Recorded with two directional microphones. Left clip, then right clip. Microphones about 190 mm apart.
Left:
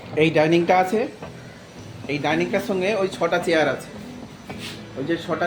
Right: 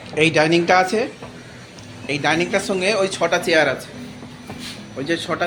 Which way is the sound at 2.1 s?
Centre (ahead or behind).